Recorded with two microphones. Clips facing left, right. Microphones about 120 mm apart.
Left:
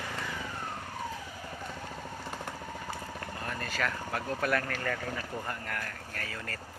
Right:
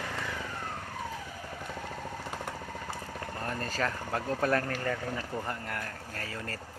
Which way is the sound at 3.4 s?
35° right (ahead or behind).